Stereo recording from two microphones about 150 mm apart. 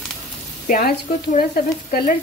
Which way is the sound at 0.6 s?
60° left (ahead or behind).